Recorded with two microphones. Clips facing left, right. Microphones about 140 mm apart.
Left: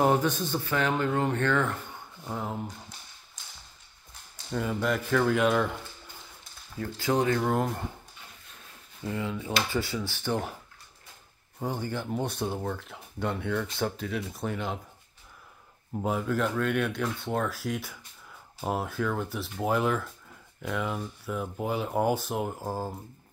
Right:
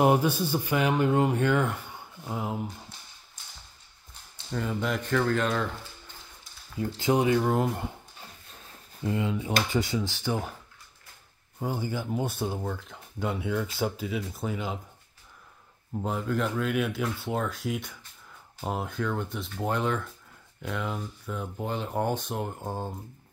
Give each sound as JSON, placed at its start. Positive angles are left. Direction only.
{"t": 0.0, "sound": "speech", "side_deg": -10}
{"t": 4.5, "sound": "speech", "side_deg": 0}
{"t": 6.8, "sound": "speech", "side_deg": -15}
{"t": 9.0, "sound": "speech", "side_deg": -20}
{"t": 11.6, "sound": "speech", "side_deg": -5}
{"t": 15.9, "sound": "speech", "side_deg": 5}